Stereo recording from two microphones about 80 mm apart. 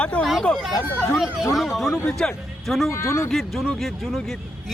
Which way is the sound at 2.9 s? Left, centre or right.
Left.